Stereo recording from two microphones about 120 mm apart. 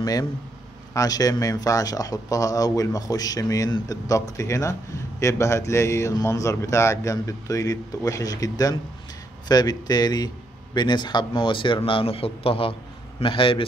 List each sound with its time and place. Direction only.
0.0 s a man's voice: 30° left (ahead or behind); by 13.7 s 45° left (ahead or behind)